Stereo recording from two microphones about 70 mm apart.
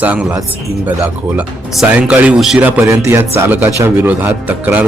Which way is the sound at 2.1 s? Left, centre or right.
Centre.